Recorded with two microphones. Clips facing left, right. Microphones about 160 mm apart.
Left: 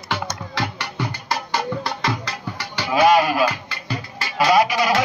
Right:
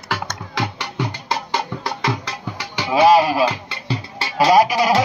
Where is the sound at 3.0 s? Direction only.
30° right (ahead or behind).